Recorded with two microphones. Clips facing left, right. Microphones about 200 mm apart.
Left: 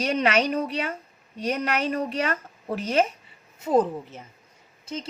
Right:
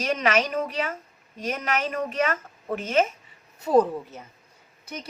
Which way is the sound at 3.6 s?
20° left (ahead or behind).